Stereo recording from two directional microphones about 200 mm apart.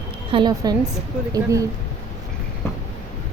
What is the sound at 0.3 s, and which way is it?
A woman's voice, 25° right (ahead or behind).